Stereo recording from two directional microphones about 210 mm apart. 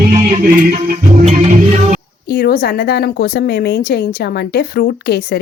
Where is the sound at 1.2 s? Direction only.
35° right (ahead or behind).